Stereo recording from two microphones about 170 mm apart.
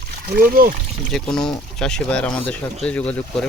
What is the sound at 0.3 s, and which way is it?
Speech, 60° right (ahead or behind).